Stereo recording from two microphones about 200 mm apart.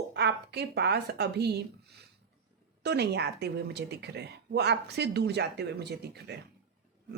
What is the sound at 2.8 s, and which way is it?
Speech, 55° right (ahead or behind).